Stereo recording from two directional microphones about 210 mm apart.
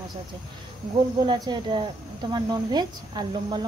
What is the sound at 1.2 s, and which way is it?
Speech, 20° right (ahead or behind).